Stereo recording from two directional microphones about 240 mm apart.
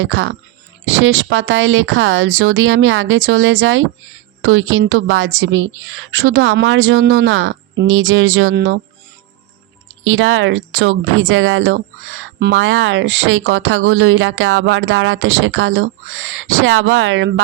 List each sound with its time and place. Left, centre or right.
0.0 s speech: right
8.5 s speech: right
10.0 s speech: right